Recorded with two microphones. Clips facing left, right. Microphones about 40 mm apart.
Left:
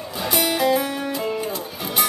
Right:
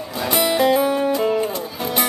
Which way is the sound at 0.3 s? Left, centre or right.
Centre.